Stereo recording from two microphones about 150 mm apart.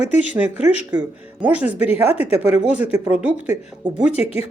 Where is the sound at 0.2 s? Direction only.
10° right (ahead or behind).